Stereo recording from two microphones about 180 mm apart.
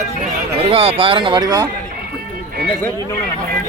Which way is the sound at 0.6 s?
30° right (ahead or behind).